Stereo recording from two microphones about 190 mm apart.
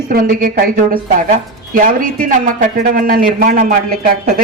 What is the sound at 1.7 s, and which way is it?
Speech, 45° right (ahead or behind).